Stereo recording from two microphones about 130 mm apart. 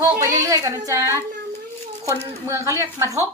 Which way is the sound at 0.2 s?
25° right (ahead or behind).